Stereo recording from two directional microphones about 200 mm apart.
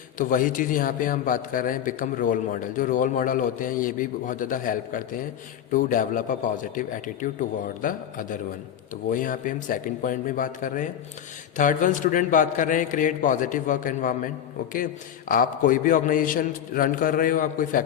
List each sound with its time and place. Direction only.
0.2 s a man's voice: 40° left (ahead or behind)
15.3 s a man's voice: 45° left (ahead or behind)